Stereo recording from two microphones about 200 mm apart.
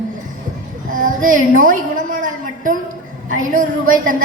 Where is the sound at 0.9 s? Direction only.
40° right (ahead or behind).